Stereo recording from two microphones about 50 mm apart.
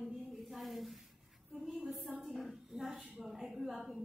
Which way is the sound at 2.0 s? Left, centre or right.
Right.